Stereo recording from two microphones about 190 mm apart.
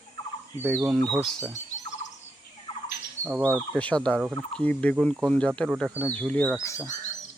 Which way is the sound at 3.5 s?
5° left (ahead or behind).